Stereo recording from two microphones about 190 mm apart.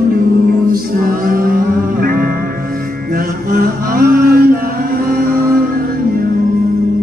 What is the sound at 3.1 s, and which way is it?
Mantra, 50° right (ahead or behind).